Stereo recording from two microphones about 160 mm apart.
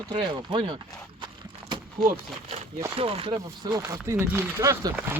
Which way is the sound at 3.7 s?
20° right (ahead or behind).